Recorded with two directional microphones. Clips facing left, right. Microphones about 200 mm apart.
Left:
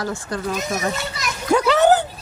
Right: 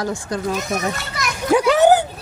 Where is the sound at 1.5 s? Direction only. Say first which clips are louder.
Right 2 dB; 10° right (ahead or behind).